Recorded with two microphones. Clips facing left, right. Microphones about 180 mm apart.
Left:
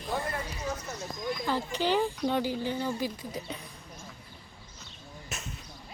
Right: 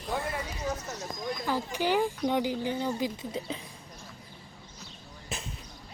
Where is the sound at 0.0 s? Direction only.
5° right (ahead or behind).